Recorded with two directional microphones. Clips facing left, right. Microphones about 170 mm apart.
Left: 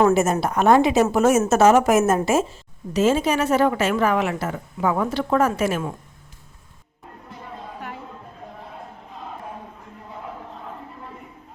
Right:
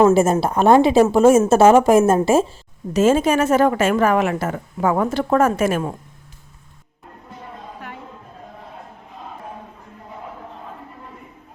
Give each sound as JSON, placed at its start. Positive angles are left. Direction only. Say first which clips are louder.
{"t": 0.1, "sound": "a woman's voice", "louder": "right 4 dB", "side_deg": -30}
{"t": 2.9, "sound": "a woman's voice", "louder": "right 4 dB", "side_deg": -50}
{"t": 7.8, "sound": "chatter", "louder": "left 1 dB", "side_deg": 0}